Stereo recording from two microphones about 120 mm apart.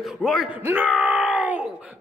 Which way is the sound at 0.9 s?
5° right (ahead or behind).